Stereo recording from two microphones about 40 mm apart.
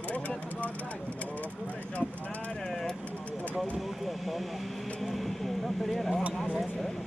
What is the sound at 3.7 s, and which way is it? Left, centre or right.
Vehicle, centre.